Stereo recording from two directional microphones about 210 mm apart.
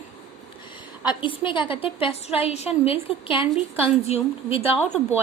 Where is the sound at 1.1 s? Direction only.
25° left (ahead or behind).